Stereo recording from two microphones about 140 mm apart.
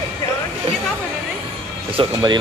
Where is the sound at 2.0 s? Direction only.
40° right (ahead or behind).